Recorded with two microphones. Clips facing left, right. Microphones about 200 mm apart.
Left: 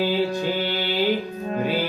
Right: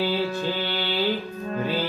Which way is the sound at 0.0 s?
15° left (ahead or behind).